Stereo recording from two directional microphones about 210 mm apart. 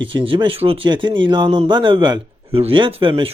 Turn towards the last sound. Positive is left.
turn(degrees=-25)  # may be behind; listen again after turning